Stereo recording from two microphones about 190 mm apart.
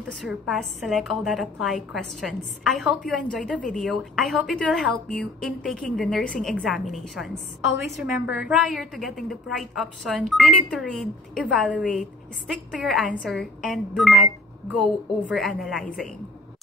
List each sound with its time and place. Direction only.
0.1 s a woman's voice: centre (ahead or behind)
15.2 s a woman's voice: centre (ahead or behind)